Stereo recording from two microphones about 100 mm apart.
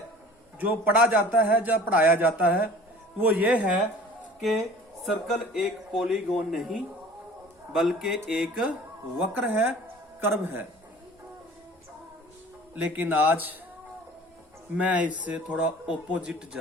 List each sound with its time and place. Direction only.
0.6 s a man's voice: 15° right (ahead or behind)
4.4 s a man's voice: centre (ahead or behind)
9.1 s a man's voice: 15° right (ahead or behind)
12.7 s a man's voice: 15° right (ahead or behind)
14.8 s a man's voice: 15° right (ahead or behind)